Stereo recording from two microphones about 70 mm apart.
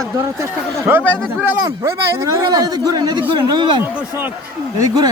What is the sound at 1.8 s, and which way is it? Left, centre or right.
Speech, right.